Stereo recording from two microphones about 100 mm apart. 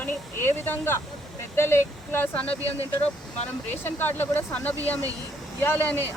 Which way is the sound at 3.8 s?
20° left (ahead or behind).